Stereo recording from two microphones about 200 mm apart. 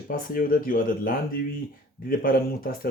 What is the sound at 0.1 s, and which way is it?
Speech, 45° left (ahead or behind).